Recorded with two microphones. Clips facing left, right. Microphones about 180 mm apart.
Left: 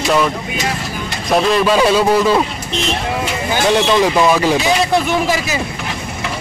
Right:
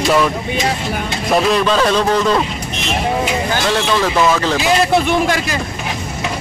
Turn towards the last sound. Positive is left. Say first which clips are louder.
# even
turn(degrees=5)  # may be behind; listen again after turning